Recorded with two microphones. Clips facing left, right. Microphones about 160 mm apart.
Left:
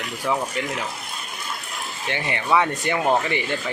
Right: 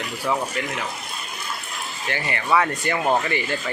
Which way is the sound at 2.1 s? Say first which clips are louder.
Left 1 dB; 20° left (ahead or behind).